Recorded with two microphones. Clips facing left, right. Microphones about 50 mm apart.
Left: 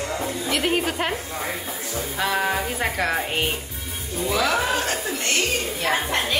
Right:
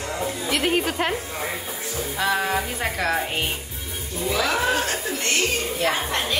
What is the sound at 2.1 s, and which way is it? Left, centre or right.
A woman's voice, centre.